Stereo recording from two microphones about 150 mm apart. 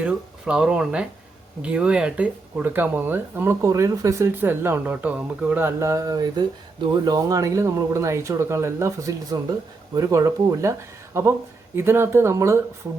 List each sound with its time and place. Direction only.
0.0 s speech: 5° right (ahead or behind)